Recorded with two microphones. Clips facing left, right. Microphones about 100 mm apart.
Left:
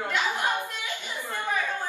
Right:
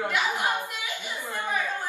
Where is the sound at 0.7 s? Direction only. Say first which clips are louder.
Even; 15° right (ahead or behind).